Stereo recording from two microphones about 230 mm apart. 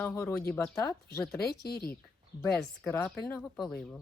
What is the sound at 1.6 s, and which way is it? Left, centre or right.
Speech, left.